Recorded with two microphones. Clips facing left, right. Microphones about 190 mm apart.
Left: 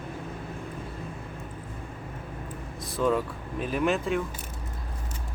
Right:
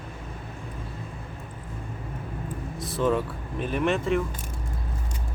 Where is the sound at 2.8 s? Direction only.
Centre (ahead or behind).